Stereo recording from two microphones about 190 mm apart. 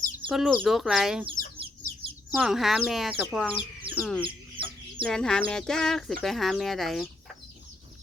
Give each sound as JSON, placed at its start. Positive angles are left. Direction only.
{"t": 0.3, "sound": "speech", "side_deg": 0}
{"t": 2.3, "sound": "speech", "side_deg": -5}
{"t": 3.9, "sound": "chicken", "side_deg": -25}
{"t": 5.0, "sound": "speech", "side_deg": 5}